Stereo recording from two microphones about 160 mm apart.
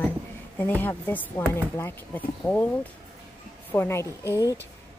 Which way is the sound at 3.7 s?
15° left (ahead or behind).